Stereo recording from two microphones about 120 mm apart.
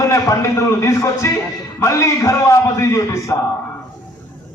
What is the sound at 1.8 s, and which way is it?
A man's voice, 25° left (ahead or behind).